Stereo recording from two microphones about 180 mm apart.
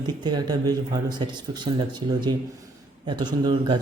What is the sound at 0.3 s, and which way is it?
Speech, 20° right (ahead or behind).